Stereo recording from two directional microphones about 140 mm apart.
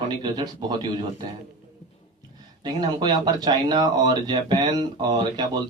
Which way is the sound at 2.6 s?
30° right (ahead or behind).